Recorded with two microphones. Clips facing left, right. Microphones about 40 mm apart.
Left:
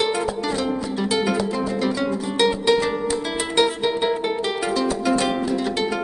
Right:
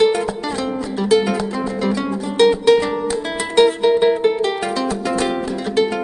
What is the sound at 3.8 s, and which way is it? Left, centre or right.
Music, centre.